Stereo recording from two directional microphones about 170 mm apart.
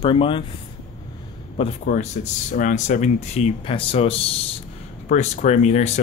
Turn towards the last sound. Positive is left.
turn(degrees=40)  # may be behind; listen again after turning